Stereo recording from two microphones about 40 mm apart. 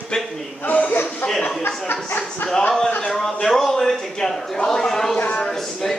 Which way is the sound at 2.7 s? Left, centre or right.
Left.